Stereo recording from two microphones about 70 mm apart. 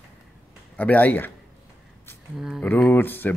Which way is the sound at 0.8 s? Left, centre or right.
Left.